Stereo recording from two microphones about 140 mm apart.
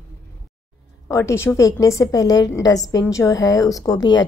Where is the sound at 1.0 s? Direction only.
20° left (ahead or behind).